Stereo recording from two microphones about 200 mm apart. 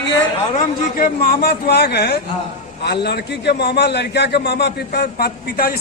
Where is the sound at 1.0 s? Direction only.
50° left (ahead or behind).